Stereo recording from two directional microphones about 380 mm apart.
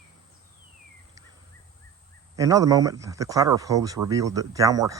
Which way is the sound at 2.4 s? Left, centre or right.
Centre.